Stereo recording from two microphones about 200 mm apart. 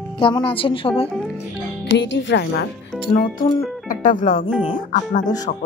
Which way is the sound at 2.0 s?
65° left (ahead or behind).